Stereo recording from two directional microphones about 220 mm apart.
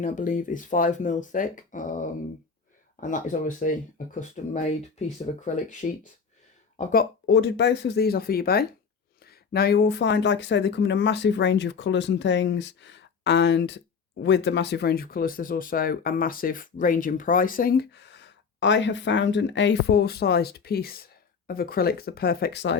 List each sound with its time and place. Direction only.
0.0 s speech: 35° left (ahead or behind); by 22.8 s 50° left (ahead or behind)